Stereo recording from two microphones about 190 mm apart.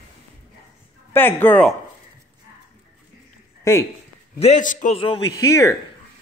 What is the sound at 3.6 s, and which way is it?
Speech, 15° left (ahead or behind).